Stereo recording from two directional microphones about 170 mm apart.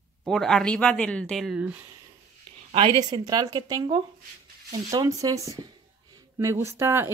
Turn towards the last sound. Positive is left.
turn(degrees=-15)  # may be behind; listen again after turning